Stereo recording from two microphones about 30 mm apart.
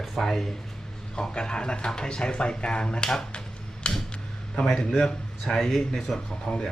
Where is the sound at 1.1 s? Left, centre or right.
Left.